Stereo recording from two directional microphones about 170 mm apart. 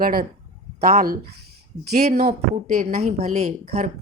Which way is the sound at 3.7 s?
65° right (ahead or behind).